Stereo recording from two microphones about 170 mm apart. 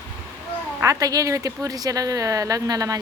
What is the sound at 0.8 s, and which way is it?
Speech, 20° right (ahead or behind).